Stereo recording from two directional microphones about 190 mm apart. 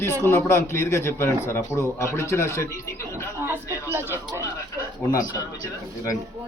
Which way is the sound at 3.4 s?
10° right (ahead or behind).